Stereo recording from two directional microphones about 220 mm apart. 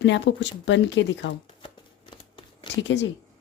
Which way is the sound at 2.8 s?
55° left (ahead or behind).